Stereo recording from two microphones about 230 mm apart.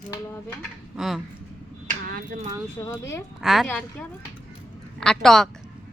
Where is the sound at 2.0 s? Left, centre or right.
Right.